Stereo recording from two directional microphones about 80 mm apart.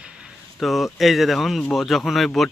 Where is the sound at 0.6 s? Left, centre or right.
Centre.